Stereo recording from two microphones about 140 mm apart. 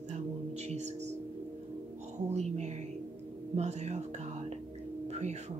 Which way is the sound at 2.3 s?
50° right (ahead or behind).